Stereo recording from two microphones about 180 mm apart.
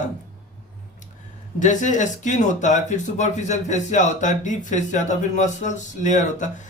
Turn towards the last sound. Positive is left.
turn(degrees=45)  # may be behind; listen again after turning